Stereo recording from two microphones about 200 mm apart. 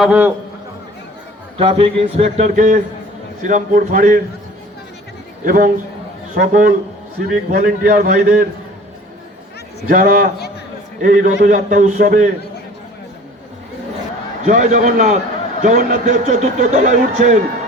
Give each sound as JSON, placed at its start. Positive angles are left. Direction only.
{"t": 0.0, "sound": "a man's voice", "side_deg": -5}
{"t": 1.5, "sound": "speech", "side_deg": -25}
{"t": 5.5, "sound": "a man's voice", "side_deg": -45}
{"t": 9.9, "sound": "a man's voice", "side_deg": -40}
{"t": 14.4, "sound": "speech", "side_deg": -40}